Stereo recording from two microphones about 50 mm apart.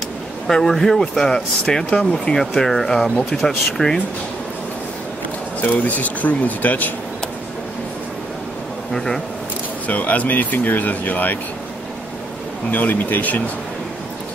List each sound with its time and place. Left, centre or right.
0.5 s speech: centre
1.9 s speech: left
2.1 s speech: centre
5.6 s speech: left
8.9 s speech: centre
9.8 s speech: left
12.7 s speech: left